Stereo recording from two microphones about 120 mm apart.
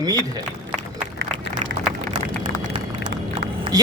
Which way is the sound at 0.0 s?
30° right (ahead or behind).